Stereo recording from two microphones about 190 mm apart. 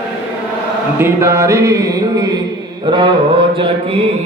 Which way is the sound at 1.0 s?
15° right (ahead or behind).